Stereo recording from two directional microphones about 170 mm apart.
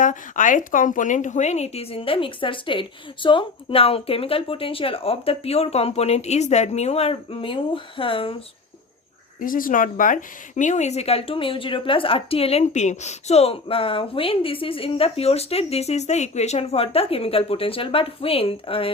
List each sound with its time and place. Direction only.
0.0 s a woman's voice: 50° left (ahead or behind); by 8.4 s 30° left (ahead or behind)
9.4 s speech: 55° left (ahead or behind); by 18.9 s 35° left (ahead or behind)